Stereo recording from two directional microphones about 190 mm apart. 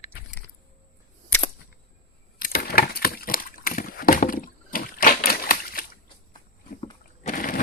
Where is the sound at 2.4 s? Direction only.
50° left (ahead or behind).